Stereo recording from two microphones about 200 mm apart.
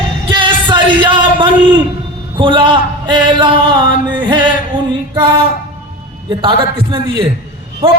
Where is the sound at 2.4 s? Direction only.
25° right (ahead or behind).